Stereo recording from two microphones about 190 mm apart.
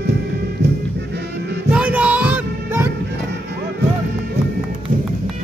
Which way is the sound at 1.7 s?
5° right (ahead or behind).